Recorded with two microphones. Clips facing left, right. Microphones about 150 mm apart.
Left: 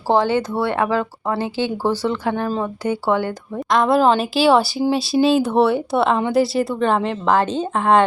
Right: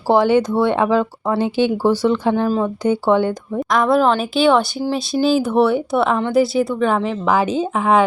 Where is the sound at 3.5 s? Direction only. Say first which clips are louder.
Even; centre (ahead or behind).